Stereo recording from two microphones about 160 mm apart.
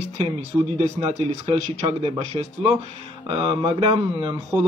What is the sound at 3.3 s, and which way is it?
Speech, 30° right (ahead or behind).